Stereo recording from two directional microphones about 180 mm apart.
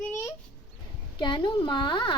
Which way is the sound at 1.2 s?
25° left (ahead or behind).